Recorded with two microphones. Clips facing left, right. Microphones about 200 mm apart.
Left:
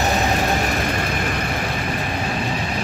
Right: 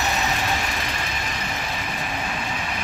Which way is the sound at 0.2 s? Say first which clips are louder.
Left 6 dB; 45° left (ahead or behind).